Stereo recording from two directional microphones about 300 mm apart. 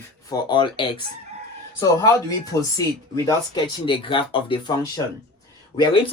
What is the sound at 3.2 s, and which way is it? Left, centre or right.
Speech, centre.